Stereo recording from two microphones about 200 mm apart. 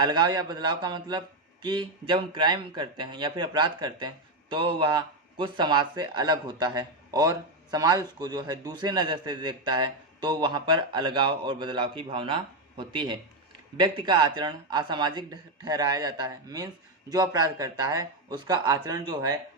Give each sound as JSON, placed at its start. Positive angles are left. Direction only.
{"t": 0.0, "sound": "speech", "side_deg": -20}